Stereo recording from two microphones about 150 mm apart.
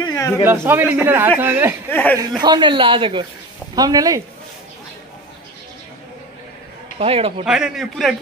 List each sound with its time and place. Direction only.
0.0 s a sound: 20° left (ahead or behind)
0.4 s a man's voice: 15° right (ahead or behind)
1.9 s speech: 10° left (ahead or behind)
2.4 s speech: 30° right (ahead or behind)
7.0 s speech: 40° right (ahead or behind)
7.4 s a man's voice: 5° right (ahead or behind)